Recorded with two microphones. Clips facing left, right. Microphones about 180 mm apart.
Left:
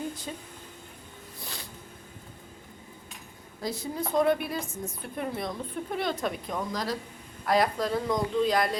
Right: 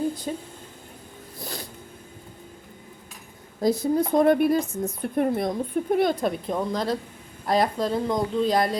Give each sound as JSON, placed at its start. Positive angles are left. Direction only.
{"t": 0.3, "sound": "speech", "side_deg": -40}
{"t": 1.4, "sound": "a sound", "side_deg": -40}
{"t": 3.6, "sound": "a woman's voice", "side_deg": -45}